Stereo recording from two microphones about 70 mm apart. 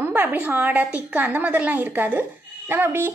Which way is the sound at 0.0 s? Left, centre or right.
Right.